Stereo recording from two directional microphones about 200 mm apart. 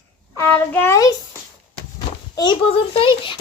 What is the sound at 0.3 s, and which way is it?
Speech, 10° left (ahead or behind).